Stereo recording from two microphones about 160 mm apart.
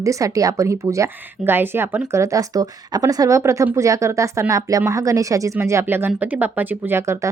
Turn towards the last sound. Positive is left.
turn(degrees=-15)  # may be behind; listen again after turning